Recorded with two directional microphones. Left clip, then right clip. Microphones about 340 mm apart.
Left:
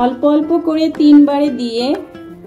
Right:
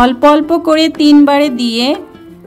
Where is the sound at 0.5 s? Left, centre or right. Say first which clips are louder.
Right 2 dB; right.